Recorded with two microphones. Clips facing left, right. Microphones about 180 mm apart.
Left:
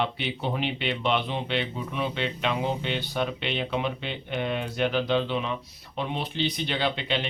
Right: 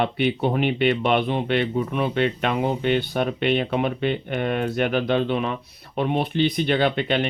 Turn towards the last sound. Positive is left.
turn(degrees=-55)  # may be behind; listen again after turning